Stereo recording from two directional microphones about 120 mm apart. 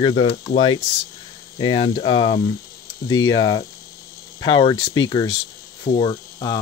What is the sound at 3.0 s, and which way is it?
Speech, 30° left (ahead or behind).